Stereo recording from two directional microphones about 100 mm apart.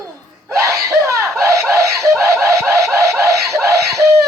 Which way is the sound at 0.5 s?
30° right (ahead or behind).